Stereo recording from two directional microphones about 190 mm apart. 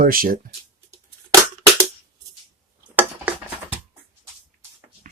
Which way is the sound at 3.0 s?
10° right (ahead or behind).